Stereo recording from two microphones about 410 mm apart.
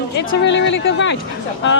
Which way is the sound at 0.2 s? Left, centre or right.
Left.